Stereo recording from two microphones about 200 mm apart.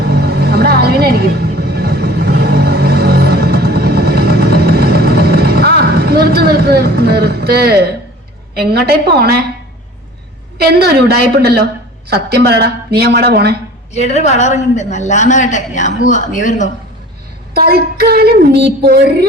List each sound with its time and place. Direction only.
0.0 s vehicle: 55° right (ahead or behind)
8.5 s a woman's voice: 55° right (ahead or behind)
10.6 s a woman's voice: 55° right (ahead or behind)
13.9 s a woman's voice: 35° left (ahead or behind)
17.5 s a woman's voice: 50° right (ahead or behind)